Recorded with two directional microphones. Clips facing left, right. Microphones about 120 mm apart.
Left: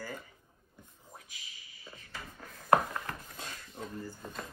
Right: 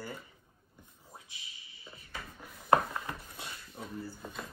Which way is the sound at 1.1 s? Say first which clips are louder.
Right 1 dB; 25° right (ahead or behind).